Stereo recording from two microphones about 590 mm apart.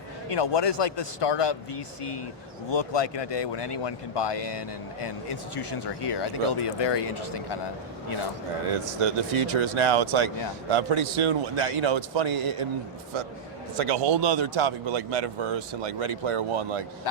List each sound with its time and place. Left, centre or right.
0.3 s speech: left
6.1 s speech: left
8.7 s a man's voice: right
13.7 s speech: right